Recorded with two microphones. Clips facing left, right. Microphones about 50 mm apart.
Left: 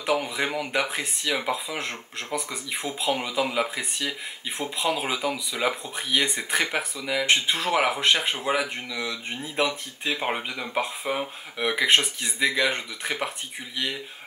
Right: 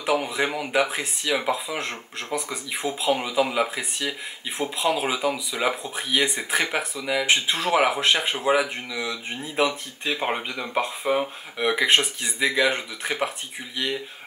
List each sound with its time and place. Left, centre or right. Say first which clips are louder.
0.0 s speech: right 2 dB; centre